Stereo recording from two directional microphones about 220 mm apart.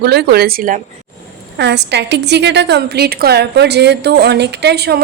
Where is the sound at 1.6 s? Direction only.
50° right (ahead or behind).